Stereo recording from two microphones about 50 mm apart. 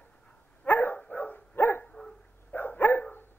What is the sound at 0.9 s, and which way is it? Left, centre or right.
Dog, left.